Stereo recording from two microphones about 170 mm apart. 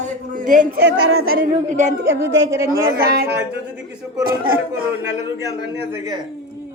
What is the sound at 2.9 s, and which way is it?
Speech, 60° right (ahead or behind).